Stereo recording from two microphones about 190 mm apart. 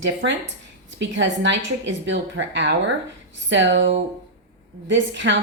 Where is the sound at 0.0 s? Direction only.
75° right (ahead or behind).